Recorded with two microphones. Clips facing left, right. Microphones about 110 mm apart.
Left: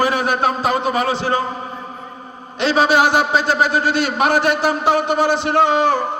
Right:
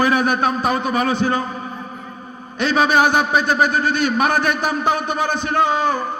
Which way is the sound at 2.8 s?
90° left.